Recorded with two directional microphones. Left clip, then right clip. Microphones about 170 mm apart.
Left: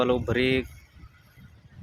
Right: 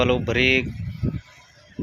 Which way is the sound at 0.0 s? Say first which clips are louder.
Right 4 dB; 10° left (ahead or behind).